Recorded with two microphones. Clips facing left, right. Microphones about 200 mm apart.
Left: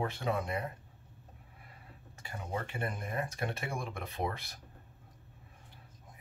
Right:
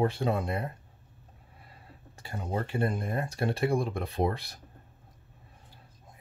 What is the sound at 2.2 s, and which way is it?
Speech, 35° right (ahead or behind).